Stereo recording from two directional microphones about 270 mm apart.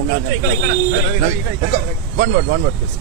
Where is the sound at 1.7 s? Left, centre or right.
Right.